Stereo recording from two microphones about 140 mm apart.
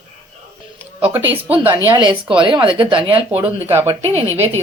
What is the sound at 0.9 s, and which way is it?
Speech, 15° right (ahead or behind).